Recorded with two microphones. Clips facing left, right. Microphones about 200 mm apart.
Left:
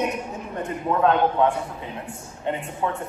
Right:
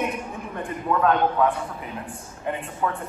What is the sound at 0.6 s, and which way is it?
Speech, 25° left (ahead or behind).